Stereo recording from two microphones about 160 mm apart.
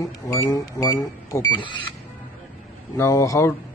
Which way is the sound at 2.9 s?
20° left (ahead or behind).